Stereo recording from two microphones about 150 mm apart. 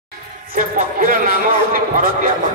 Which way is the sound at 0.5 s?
65° right (ahead or behind).